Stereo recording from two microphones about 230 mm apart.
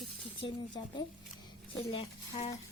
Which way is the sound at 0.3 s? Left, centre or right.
Left.